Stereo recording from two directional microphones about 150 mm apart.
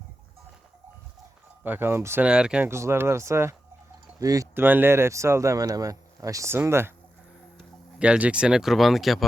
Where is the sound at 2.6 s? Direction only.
15° right (ahead or behind).